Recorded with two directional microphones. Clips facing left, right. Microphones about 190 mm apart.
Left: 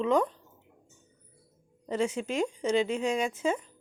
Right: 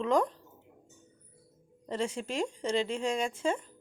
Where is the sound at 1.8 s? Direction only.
5° left (ahead or behind).